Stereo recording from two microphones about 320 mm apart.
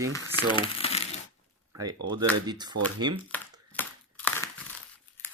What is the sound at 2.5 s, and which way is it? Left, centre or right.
Speech, centre.